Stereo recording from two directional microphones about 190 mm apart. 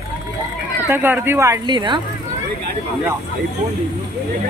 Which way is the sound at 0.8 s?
10° right (ahead or behind).